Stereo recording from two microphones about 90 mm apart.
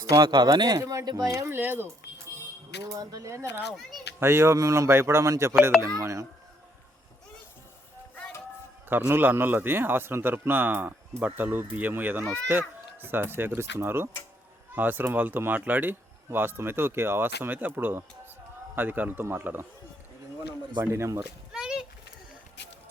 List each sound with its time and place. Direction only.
0.0 s speech: 35° right (ahead or behind)
0.3 s speech: 55° right (ahead or behind)
1.5 s speech: 25° right (ahead or behind)
2.8 s speech: 40° right (ahead or behind)
8.9 s speech: 25° right (ahead or behind)
20.9 s speech: 30° right (ahead or behind)
21.5 s a sound: 10° right (ahead or behind)